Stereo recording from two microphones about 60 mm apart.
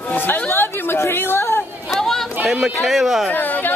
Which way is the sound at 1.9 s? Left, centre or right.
Centre.